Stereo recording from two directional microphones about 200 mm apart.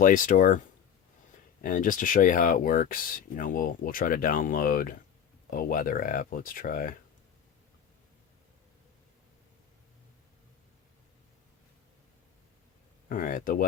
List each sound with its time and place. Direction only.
0.0 s speech: 40° left (ahead or behind)
1.6 s speech: 40° left (ahead or behind)
13.1 s speech: 45° left (ahead or behind)